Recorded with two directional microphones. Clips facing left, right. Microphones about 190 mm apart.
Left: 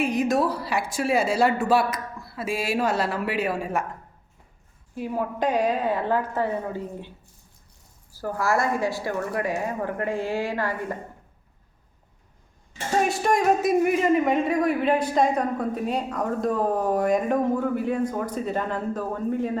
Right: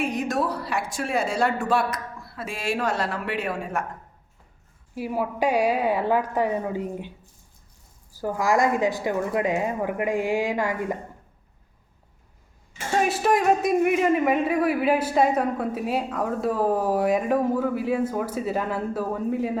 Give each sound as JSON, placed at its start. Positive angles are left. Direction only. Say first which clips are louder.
{"t": 0.0, "sound": "speech", "louder": "left 3 dB", "side_deg": 0}
{"t": 4.9, "sound": "a woman's voice", "louder": "right 1 dB", "side_deg": -5}
{"t": 8.1, "sound": "a woman's voice", "louder": "right 2 dB", "side_deg": -15}
{"t": 13.0, "sound": "speech", "louder": "right 1 dB", "side_deg": 0}